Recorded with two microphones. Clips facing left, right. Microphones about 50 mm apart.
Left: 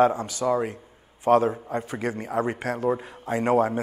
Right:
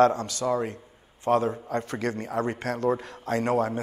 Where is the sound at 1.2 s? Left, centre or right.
Left.